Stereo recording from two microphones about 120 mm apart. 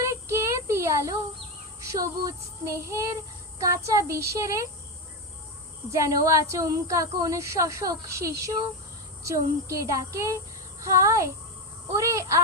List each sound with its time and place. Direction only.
0.0 s child singing: 25° right (ahead or behind)
1.8 s speech: 25° right (ahead or behind)
5.9 s speech: 25° right (ahead or behind)